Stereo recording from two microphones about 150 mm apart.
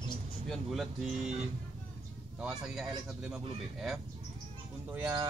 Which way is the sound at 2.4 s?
5° right (ahead or behind).